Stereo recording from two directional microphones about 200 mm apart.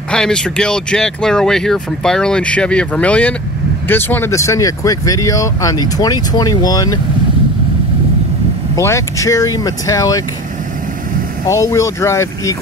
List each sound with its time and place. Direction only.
0.1 s speech: 5° left (ahead or behind)
8.7 s speech: 15° left (ahead or behind)
11.4 s speech: 15° left (ahead or behind)